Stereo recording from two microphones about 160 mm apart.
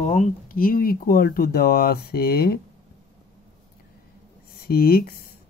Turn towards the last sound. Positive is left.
turn(degrees=65)  # may be behind; listen again after turning